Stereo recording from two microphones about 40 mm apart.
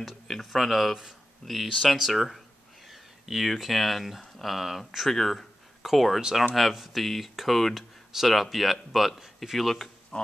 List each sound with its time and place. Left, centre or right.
0.3 s speech: centre
5.1 s speech: centre
5.8 s speech: centre
10.1 s a sound: left